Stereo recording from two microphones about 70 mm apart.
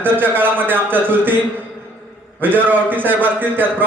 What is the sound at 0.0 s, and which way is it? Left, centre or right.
A man's voice, right.